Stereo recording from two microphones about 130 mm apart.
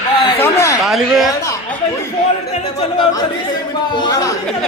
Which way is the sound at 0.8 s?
Centre (ahead or behind).